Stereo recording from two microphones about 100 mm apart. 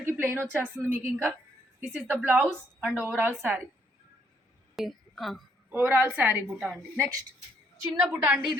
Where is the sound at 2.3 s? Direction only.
15° right (ahead or behind).